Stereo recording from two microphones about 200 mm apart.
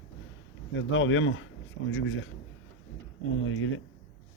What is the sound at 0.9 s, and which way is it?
Speech, 70° left (ahead or behind).